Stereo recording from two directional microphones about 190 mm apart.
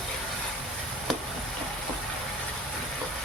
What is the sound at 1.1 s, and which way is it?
Chop, centre (ahead or behind).